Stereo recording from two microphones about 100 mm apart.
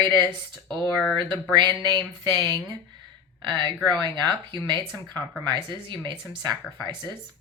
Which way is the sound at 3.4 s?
55° right (ahead or behind).